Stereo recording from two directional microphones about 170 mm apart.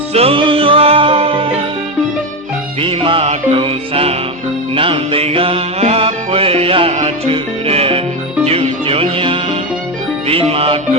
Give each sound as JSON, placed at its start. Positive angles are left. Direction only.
{"t": 0.1, "sound": "music", "side_deg": -35}
{"t": 2.8, "sound": "music", "side_deg": -30}